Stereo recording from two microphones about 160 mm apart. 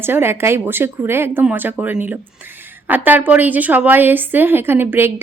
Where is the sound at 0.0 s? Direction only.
15° right (ahead or behind).